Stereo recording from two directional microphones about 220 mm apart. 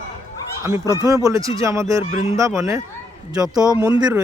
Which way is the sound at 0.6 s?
15° right (ahead or behind).